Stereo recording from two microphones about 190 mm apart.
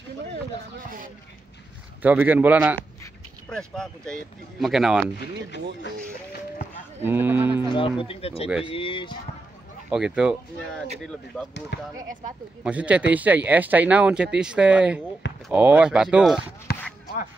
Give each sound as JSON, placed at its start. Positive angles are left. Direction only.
{"t": 2.0, "sound": "speech", "side_deg": -10}
{"t": 3.4, "sound": "speech", "side_deg": 5}
{"t": 5.1, "sound": "speech", "side_deg": 60}
{"t": 7.0, "sound": "speech", "side_deg": -10}
{"t": 7.7, "sound": "speech", "side_deg": 25}
{"t": 9.8, "sound": "speech", "side_deg": -5}
{"t": 12.6, "sound": "speech", "side_deg": -5}
{"t": 16.7, "sound": "a sound", "side_deg": 55}